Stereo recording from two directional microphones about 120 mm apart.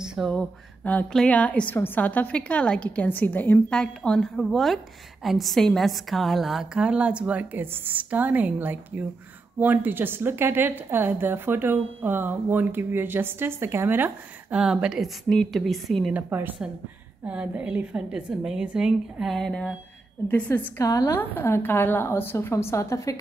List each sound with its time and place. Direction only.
0.0 s a sound: 5° right (ahead or behind)
0.3 s a woman's voice: 10° left (ahead or behind)
16.1 s a woman's voice: 15° right (ahead or behind); by 20.8 s 15° left (ahead or behind)
20.8 s a woman's voice: 30° left (ahead or behind)